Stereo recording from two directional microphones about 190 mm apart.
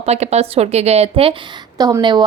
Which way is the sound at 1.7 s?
20° right (ahead or behind).